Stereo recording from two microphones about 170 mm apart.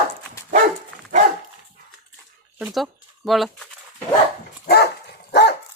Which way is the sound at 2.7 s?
Centre (ahead or behind).